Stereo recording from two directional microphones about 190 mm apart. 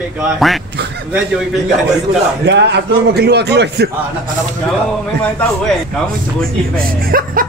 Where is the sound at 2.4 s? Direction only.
65° right (ahead or behind).